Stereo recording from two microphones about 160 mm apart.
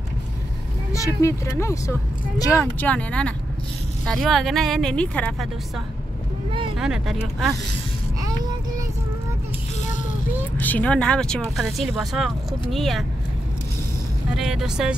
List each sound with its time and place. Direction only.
0.9 s speech: 20° left (ahead or behind)
6.8 s speech: 5° right (ahead or behind)
8.2 s child singing: 20° right (ahead or behind)
10.6 s speech: 10° left (ahead or behind)
14.3 s speech: 5° right (ahead or behind)